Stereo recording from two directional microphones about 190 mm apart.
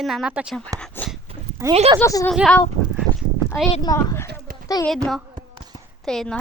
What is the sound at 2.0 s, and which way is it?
Speech, 20° left (ahead or behind).